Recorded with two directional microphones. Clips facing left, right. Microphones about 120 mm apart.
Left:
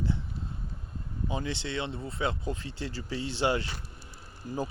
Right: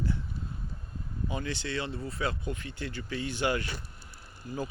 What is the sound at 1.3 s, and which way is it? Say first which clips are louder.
Speech: left 1 dB; 25° left (ahead or behind).